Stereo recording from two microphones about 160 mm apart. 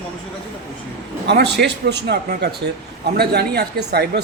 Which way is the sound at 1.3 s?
90° right.